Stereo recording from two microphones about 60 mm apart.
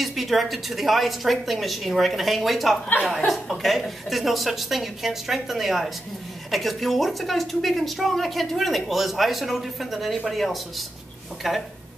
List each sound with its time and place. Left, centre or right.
0.0 s a woman's voice: centre